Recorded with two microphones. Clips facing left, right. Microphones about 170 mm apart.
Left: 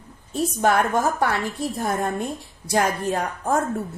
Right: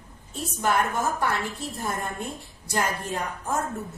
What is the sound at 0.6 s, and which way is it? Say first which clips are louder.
Speech: left 4 dB; 70° left (ahead or behind).